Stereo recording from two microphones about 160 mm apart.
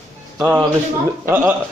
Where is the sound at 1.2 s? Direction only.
15° right (ahead or behind).